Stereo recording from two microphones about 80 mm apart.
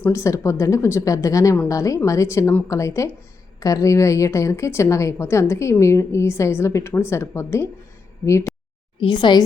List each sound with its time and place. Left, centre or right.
0.1 s a woman's voice: left
9.0 s speech: left